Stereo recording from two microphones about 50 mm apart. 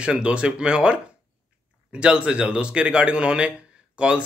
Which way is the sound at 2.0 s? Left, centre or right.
Right.